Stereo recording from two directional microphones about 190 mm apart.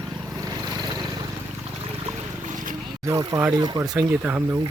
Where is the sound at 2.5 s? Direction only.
45° right (ahead or behind).